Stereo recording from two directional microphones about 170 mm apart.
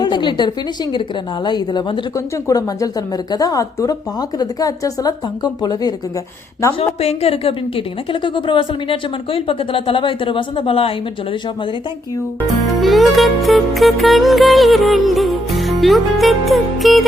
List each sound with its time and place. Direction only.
0.0 s a sound: 25° left (ahead or behind)
1.5 s a woman's voice: 25° left (ahead or behind)
6.7 s a woman's voice: 35° left (ahead or behind)
12.6 s music: centre (ahead or behind)